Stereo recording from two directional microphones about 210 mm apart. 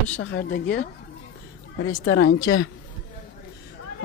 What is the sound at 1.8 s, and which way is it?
Speech, 75° left (ahead or behind).